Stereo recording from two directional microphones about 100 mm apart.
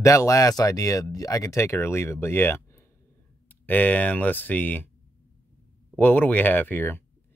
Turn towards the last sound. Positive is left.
turn(degrees=20)  # may be behind; listen again after turning